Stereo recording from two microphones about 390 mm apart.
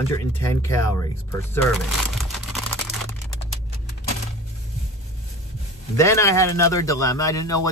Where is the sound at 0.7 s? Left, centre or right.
Left.